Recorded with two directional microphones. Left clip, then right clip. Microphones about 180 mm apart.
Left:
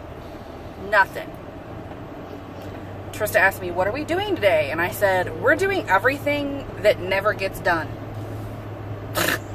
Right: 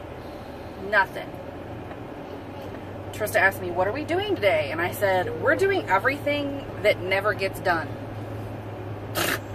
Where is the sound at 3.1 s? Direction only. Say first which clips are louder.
Left 3 dB; 30° left (ahead or behind).